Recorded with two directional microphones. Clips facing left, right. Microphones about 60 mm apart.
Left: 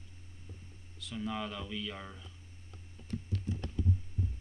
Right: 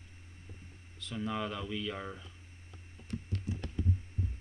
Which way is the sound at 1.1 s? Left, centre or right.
Centre.